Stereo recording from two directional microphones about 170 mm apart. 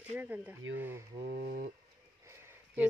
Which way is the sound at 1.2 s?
70° right (ahead or behind).